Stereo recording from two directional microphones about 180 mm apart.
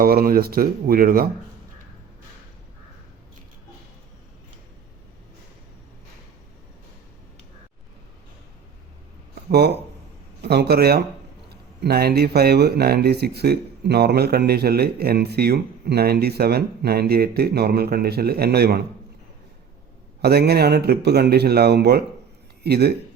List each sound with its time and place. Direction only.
0.0 s speech: 55° right (ahead or behind)
9.3 s a sound: 65° right (ahead or behind)
10.4 s speech: 65° right (ahead or behind)
20.2 s speech: 60° right (ahead or behind)